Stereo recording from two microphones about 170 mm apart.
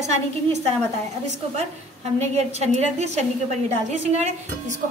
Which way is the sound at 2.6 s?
40° right (ahead or behind).